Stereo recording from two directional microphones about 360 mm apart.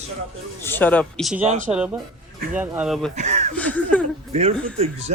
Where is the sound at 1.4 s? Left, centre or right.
Right.